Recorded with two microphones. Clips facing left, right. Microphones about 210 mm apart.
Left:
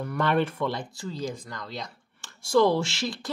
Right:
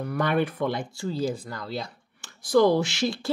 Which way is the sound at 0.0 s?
15° right (ahead or behind).